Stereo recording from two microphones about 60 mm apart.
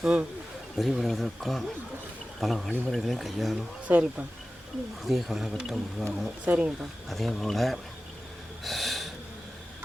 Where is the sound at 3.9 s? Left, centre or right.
Right.